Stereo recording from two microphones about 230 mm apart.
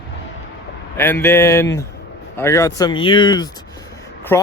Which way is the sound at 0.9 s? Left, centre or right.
Centre.